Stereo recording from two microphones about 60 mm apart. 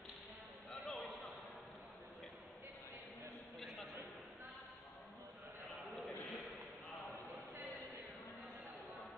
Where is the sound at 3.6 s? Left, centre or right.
Centre.